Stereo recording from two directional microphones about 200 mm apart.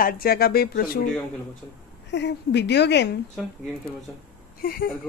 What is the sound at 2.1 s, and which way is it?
A woman's voice, 60° left (ahead or behind).